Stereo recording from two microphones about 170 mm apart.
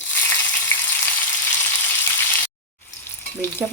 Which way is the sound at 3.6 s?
5° right (ahead or behind).